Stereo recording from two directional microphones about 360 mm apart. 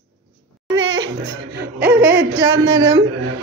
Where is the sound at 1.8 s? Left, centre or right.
Centre.